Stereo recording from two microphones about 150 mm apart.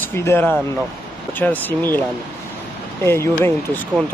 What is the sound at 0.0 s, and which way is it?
Speech, 15° left (ahead or behind).